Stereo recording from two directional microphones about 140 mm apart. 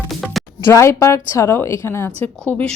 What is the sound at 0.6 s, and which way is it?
A woman's voice, 20° left (ahead or behind).